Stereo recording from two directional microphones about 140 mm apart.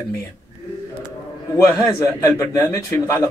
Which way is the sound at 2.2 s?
20° left (ahead or behind).